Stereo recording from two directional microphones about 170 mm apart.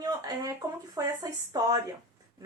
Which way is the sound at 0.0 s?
20° right (ahead or behind).